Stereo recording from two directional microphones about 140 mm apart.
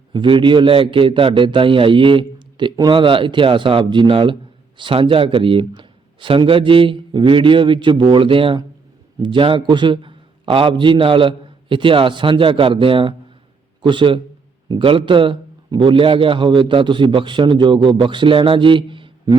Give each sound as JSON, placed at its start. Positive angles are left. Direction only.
{"t": 0.1, "sound": "a man's voice", "side_deg": -35}